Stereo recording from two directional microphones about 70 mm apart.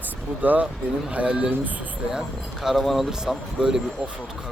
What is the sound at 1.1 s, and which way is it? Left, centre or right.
Speech, centre.